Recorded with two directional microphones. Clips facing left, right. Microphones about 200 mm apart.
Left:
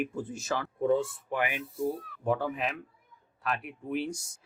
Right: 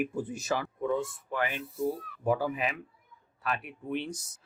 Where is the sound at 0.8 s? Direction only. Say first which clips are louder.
Left 4 dB; 30° left (ahead or behind).